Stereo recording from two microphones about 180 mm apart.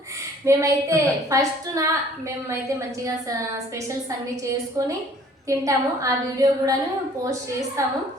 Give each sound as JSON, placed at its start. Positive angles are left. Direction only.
{"t": 0.4, "sound": "a woman's voice", "side_deg": -15}
{"t": 5.5, "sound": "a woman's voice", "side_deg": -15}
{"t": 7.8, "sound": "a woman's voice", "side_deg": -15}